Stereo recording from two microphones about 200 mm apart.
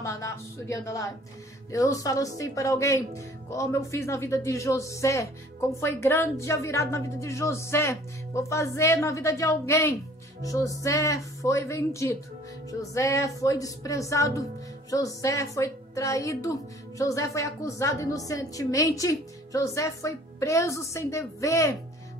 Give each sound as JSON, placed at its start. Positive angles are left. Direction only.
{"t": 0.0, "sound": "a woman's voice", "side_deg": 15}